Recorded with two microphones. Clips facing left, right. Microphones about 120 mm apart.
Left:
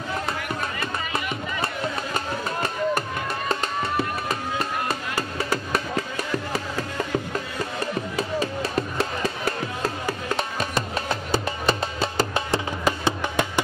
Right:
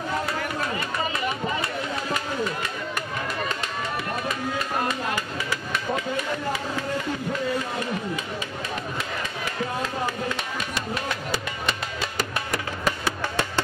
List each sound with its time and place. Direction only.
0.4 s run: 35° right (ahead or behind)
2.1 s a sound: 35° left (ahead or behind)
3.4 s music: 35° left (ahead or behind)
8.2 s music: 40° left (ahead or behind); by 13.5 s 20° left (ahead or behind)